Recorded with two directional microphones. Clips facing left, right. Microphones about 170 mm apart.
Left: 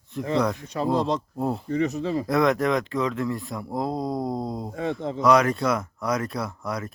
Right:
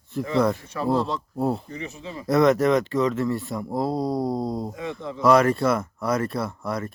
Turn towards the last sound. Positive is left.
turn(degrees=0)  # may be behind; listen again after turning